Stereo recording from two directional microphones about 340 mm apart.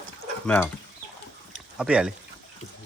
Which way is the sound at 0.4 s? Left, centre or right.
Centre.